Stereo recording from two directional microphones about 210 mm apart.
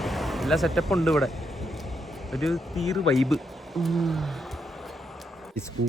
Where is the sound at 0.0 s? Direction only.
Centre (ahead or behind).